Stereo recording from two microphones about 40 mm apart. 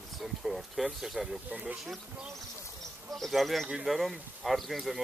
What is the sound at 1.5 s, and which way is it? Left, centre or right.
Speech, right.